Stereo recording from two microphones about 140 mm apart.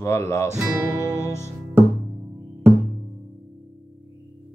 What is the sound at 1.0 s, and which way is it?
Music, 20° left (ahead or behind).